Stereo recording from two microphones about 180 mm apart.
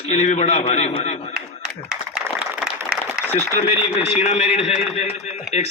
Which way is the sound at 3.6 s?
35° left (ahead or behind).